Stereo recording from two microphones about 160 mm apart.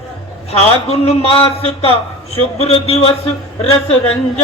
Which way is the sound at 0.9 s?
40° left (ahead or behind).